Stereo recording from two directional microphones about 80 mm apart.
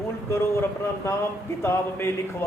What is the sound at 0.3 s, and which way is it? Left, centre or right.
Speech, left.